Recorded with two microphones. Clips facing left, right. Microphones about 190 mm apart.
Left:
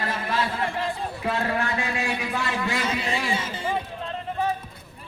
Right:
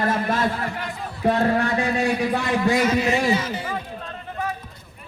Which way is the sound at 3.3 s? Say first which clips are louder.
Right 2 dB; 30° left (ahead or behind).